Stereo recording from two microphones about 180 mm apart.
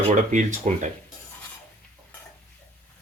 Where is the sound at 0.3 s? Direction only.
45° right (ahead or behind).